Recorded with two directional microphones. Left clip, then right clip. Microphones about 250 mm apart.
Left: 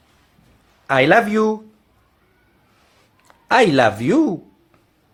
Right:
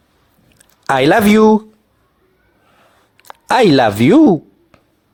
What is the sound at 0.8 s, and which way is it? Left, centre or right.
Speech, right.